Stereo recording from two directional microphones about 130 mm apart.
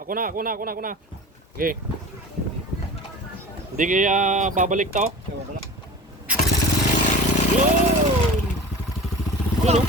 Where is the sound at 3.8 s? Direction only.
85° right.